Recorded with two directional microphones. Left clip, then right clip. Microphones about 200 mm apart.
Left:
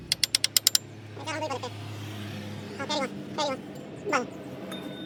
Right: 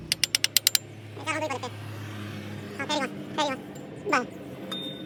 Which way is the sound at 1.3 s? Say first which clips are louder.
Right 3 dB; 25° right (ahead or behind).